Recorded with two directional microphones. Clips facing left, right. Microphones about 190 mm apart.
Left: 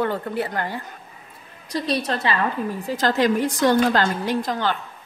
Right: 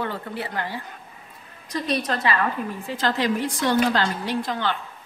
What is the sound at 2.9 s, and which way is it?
Speech, 45° left (ahead or behind).